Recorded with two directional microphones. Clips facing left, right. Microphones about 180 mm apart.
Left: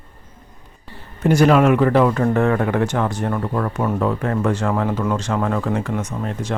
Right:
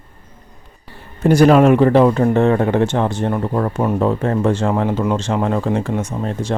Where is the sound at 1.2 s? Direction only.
35° right (ahead or behind).